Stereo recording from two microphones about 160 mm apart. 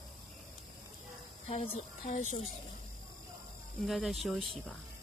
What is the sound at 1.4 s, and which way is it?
Speech, 40° left (ahead or behind).